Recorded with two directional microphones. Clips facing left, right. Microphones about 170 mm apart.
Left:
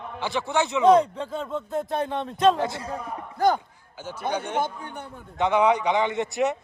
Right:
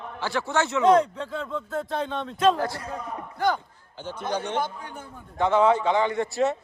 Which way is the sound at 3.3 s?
40° left (ahead or behind).